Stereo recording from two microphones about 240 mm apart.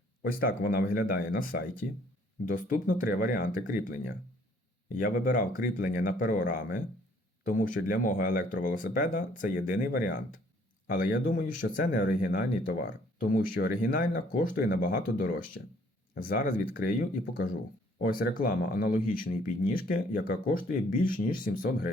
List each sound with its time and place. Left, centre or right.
0.2 s speech: left
18.0 s speech: left